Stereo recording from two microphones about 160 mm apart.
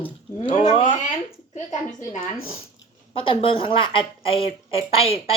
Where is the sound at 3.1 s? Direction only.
35° left (ahead or behind).